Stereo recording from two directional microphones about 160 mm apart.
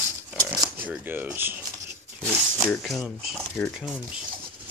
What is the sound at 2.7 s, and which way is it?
Speech, centre (ahead or behind).